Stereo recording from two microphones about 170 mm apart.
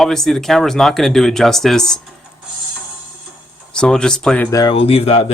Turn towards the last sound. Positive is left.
turn(degrees=35)  # may be behind; listen again after turning